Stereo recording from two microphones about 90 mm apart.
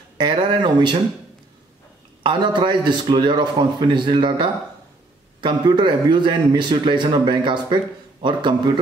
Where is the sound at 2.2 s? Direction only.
55° right (ahead or behind).